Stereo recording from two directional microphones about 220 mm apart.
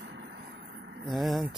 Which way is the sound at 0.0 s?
50° right (ahead or behind).